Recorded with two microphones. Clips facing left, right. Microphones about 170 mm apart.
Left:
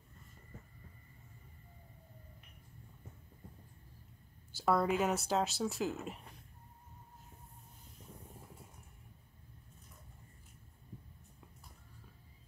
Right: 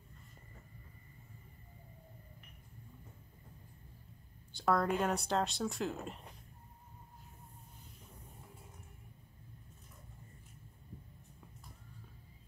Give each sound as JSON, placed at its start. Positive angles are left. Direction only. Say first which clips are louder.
{"t": 4.5, "sound": "speech", "louder": "left 1 dB", "side_deg": 5}